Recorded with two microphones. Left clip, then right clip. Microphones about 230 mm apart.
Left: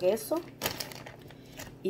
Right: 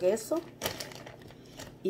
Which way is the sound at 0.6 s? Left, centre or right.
Left.